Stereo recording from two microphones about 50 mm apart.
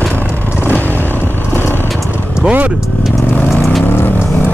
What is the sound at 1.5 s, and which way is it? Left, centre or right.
Vehicle, left.